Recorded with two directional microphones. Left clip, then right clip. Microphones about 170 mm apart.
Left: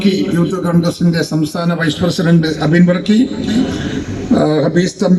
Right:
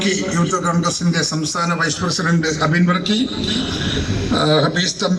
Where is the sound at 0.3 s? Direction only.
50° left (ahead or behind).